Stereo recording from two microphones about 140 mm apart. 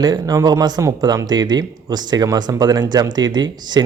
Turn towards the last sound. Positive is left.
turn(degrees=-30)  # may be behind; listen again after turning